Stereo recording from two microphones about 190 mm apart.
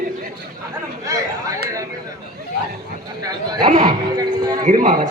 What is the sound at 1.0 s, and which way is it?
Chatter, 20° right (ahead or behind).